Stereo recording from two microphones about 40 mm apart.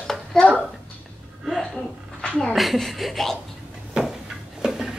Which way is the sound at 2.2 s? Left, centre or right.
Left.